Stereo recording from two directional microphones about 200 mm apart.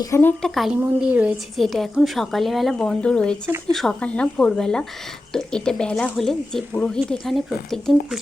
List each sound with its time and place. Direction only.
0.0 s a woman's voice: 10° left (ahead or behind)